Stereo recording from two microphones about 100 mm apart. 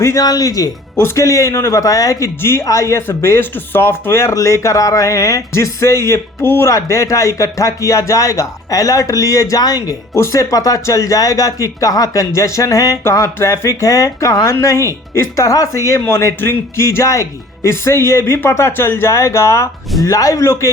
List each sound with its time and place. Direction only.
0.0 s speech: 30° left (ahead or behind)